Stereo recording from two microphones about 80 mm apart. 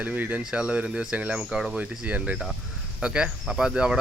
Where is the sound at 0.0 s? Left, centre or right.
Right.